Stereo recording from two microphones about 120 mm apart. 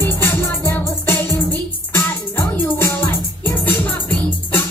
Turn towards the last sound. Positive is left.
turn(degrees=15)  # may be behind; listen again after turning